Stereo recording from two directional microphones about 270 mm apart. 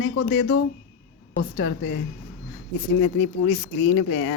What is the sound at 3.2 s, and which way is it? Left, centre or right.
A woman's voice, left.